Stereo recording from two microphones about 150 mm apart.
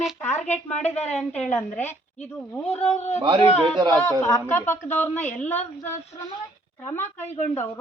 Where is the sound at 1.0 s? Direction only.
5° left (ahead or behind).